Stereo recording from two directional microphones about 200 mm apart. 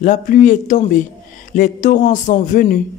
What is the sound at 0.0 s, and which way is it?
A man's voice, 40° left (ahead or behind).